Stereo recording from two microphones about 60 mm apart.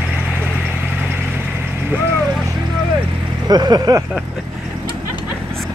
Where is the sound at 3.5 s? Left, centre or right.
Right.